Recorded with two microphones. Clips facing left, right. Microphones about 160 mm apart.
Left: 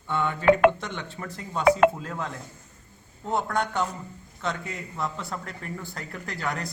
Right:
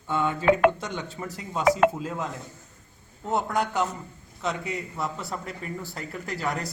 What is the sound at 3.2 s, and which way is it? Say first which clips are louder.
A man's voice: right 1 dB; 5° right (ahead or behind).